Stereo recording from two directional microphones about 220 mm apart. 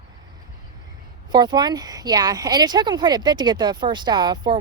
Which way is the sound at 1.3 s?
20° right (ahead or behind).